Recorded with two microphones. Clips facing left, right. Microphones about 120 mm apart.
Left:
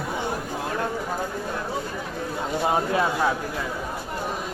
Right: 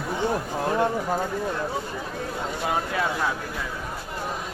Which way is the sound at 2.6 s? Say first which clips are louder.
Left 4 dB; 25° left (ahead or behind).